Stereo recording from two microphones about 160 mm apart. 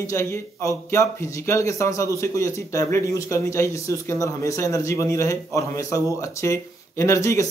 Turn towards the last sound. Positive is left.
turn(degrees=20)  # may be behind; listen again after turning